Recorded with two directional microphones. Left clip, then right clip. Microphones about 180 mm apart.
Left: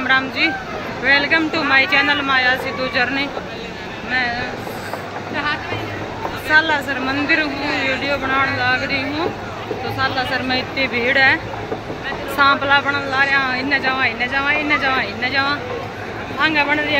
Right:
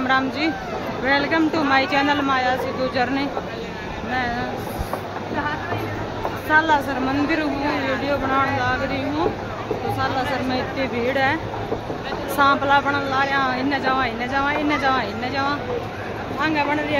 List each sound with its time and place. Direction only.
0.0 s speech: 20° right (ahead or behind)
6.5 s speech: 15° right (ahead or behind)
12.4 s speech: 15° right (ahead or behind)